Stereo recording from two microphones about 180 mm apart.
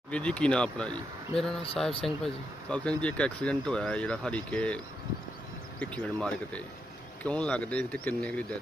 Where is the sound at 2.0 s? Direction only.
5° left (ahead or behind).